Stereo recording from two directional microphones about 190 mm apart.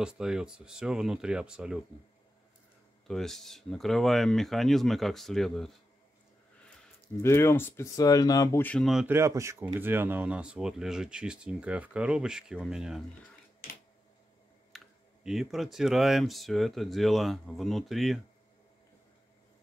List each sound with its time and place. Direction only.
0.0 s speech: 5° right (ahead or behind)
3.1 s speech: centre (ahead or behind)
7.2 s speech: 15° left (ahead or behind)
8.6 s speech: centre (ahead or behind)
9.0 s speech: 15° right (ahead or behind)
14.7 s computer keyboard: centre (ahead or behind)
15.2 s speech: centre (ahead or behind)